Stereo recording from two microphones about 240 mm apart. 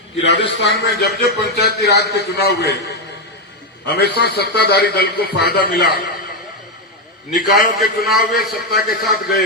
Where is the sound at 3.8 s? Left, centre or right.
Left.